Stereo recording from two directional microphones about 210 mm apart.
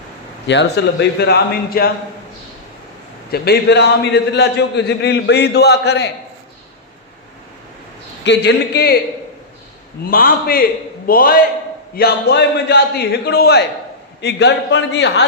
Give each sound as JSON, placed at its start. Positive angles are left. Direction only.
{"t": 0.4, "sound": "a man's voice", "side_deg": 55}
{"t": 3.3, "sound": "a man's voice", "side_deg": 50}
{"t": 8.2, "sound": "a man's voice", "side_deg": 55}
{"t": 10.1, "sound": "a man's voice", "side_deg": 45}